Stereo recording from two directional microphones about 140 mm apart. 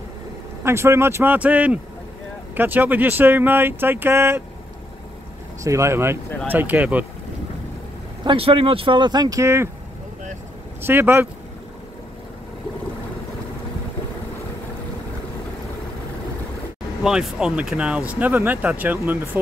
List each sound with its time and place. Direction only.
0.7 s speech: 20° right (ahead or behind)
5.6 s speech: 20° right (ahead or behind)
8.2 s speech: 40° right (ahead or behind); by 9.7 s 20° right (ahead or behind)
10.8 s speech: 15° right (ahead or behind)
17.0 s speech: 5° right (ahead or behind)